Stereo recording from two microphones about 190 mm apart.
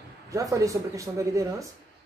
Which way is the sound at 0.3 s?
15° right (ahead or behind).